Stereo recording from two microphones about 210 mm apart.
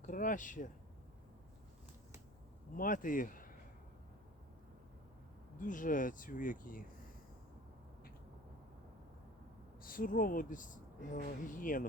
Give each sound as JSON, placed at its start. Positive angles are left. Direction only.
{"t": 0.0, "sound": "speech", "side_deg": 40}
{"t": 2.7, "sound": "speech", "side_deg": 40}
{"t": 5.5, "sound": "speech", "side_deg": 40}
{"t": 9.8, "sound": "speech", "side_deg": 40}